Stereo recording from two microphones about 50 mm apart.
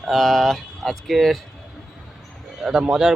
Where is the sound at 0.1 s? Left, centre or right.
Centre.